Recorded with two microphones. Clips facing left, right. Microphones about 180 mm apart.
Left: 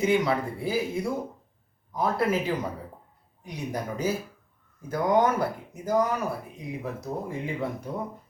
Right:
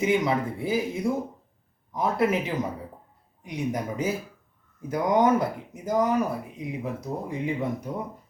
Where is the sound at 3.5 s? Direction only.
20° right (ahead or behind).